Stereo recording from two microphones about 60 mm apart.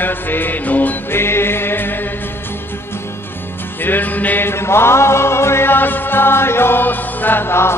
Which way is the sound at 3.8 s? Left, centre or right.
Left.